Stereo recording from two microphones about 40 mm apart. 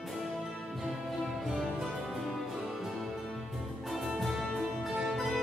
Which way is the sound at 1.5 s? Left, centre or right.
Centre.